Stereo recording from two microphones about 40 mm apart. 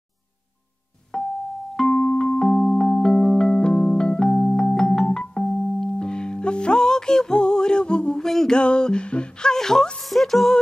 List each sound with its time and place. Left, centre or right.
1.1 s music: centre
4.3 s keyboard: centre
5.9 s music: left
8.2 s music: centre
8.5 s speech: left
10.0 s music: centre